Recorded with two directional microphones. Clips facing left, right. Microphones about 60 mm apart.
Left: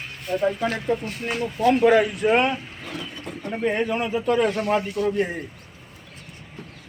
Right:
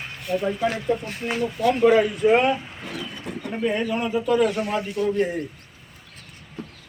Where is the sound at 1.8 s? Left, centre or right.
Left.